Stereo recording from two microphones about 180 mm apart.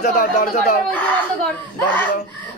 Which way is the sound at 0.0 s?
50° left (ahead or behind).